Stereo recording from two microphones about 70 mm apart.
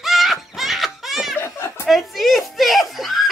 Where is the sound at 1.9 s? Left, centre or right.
Centre.